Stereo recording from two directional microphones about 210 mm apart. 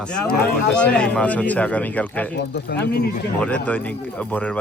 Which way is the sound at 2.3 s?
55° left (ahead or behind).